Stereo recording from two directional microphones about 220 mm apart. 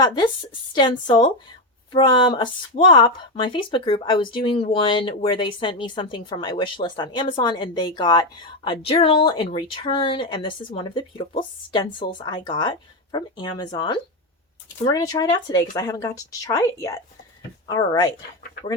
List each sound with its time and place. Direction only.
0.0 s speech: 20° left (ahead or behind)